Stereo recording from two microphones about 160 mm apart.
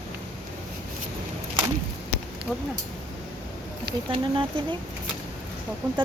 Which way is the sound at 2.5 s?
5° right (ahead or behind).